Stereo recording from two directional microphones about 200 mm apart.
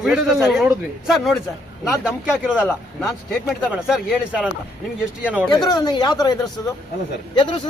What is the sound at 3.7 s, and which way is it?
Speech, 5° right (ahead or behind).